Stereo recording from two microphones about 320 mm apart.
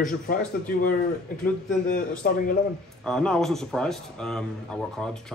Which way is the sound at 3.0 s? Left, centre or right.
Centre.